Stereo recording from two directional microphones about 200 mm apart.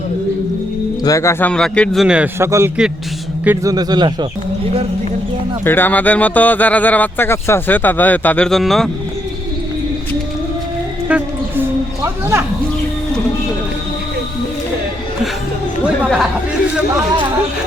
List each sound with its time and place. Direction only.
1.0 s speech: 15° left (ahead or behind); by 4.3 s 20° right (ahead or behind)
5.6 s speech: 10° left (ahead or behind)
11.1 s speech: 5° right (ahead or behind)
12.0 s a sound: 15° right (ahead or behind)